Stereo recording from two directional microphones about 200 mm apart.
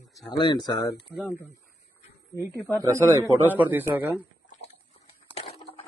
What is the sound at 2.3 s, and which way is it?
Speech, 15° right (ahead or behind).